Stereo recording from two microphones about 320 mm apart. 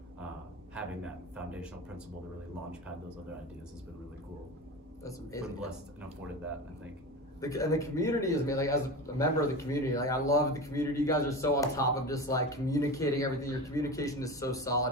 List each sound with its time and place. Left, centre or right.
0.7 s a sound: centre
5.0 s speech: centre
7.4 s speech: centre